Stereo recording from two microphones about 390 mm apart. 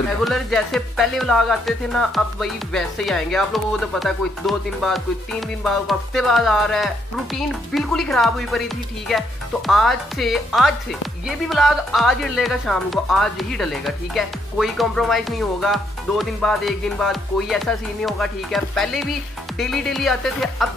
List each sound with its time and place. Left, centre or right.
0.2 s a woman's voice: centre